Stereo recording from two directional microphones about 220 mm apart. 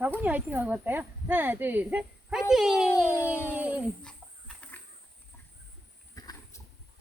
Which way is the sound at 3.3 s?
10° right (ahead or behind).